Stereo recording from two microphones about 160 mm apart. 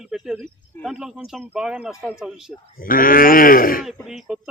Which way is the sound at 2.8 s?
60° left (ahead or behind).